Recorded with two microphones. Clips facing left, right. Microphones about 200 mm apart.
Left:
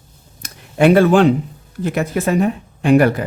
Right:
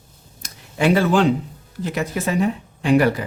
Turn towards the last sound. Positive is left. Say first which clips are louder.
# left 4 dB
turn(degrees=55)  # may be behind; listen again after turning